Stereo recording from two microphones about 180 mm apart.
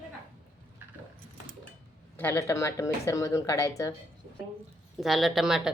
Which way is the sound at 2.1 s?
10° left (ahead or behind).